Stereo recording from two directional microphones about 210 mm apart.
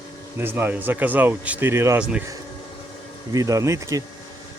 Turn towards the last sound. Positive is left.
turn(degrees=-15)  # may be behind; listen again after turning